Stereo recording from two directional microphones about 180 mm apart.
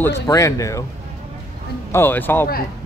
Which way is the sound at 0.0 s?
15° left (ahead or behind).